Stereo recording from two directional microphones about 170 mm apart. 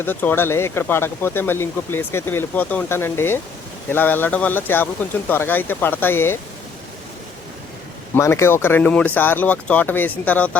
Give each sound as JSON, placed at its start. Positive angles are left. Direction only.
{"t": 0.0, "sound": "speech", "side_deg": 10}
{"t": 8.1, "sound": "speech", "side_deg": 15}